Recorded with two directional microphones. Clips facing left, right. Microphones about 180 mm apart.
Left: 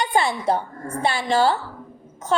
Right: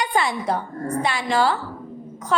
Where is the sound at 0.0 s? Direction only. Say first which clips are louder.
Left 1 dB; 25° left (ahead or behind).